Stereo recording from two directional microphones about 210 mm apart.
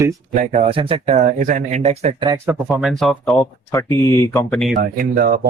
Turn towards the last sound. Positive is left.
turn(degrees=-45)  # may be behind; listen again after turning